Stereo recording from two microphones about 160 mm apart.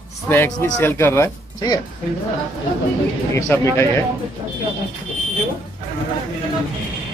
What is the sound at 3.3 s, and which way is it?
Speech, 15° left (ahead or behind).